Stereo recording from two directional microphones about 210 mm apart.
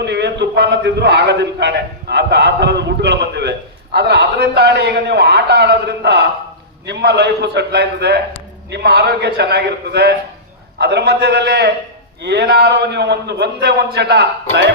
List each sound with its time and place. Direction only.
0.0 s a man's voice: 55° right (ahead or behind)